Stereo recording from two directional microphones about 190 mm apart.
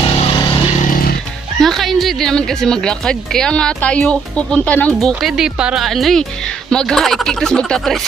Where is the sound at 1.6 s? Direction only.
Centre (ahead or behind).